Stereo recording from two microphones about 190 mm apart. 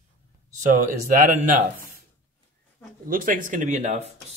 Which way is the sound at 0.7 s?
45° right (ahead or behind).